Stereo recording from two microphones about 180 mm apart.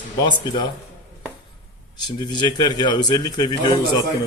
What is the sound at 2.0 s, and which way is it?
Speech, 25° left (ahead or behind).